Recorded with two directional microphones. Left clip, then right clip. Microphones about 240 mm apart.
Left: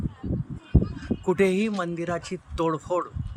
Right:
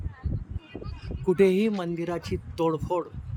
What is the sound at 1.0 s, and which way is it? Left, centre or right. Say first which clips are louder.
A man's voice: right 2 dB; centre.